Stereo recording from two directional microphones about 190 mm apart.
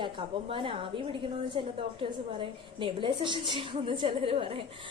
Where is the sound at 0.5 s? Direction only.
30° right (ahead or behind).